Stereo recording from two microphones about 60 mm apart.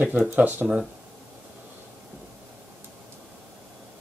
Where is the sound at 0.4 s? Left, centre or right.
Right.